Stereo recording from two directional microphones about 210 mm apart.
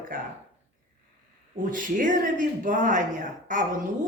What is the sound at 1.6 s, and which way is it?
Speech, 40° right (ahead or behind).